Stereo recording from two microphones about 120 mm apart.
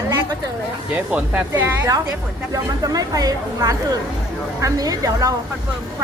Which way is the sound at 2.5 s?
30° right (ahead or behind).